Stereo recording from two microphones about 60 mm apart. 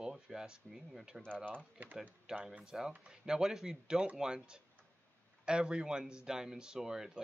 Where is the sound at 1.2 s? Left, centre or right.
Centre.